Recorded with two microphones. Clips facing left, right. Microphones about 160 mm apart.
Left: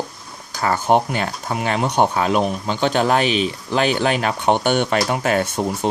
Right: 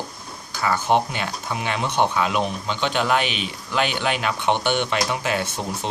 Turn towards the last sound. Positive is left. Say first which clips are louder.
# left 6 dB
turn(degrees=50)  # may be behind; listen again after turning